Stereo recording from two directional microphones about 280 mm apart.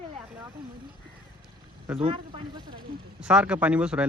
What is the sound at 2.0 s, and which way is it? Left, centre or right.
Speech, centre.